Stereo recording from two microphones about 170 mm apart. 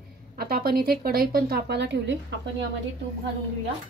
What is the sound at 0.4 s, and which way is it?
A woman's voice, 65° right (ahead or behind).